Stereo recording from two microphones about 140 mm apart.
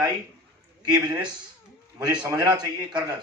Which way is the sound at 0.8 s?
30° right (ahead or behind).